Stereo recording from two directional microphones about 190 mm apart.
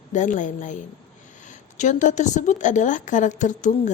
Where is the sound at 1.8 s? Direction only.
40° left (ahead or behind).